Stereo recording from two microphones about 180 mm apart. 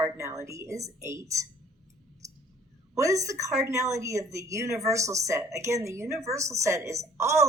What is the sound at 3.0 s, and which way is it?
A woman's voice, 15° right (ahead or behind).